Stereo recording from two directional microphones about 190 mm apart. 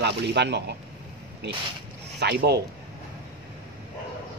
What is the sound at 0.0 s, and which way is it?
A man's voice, 60° right (ahead or behind).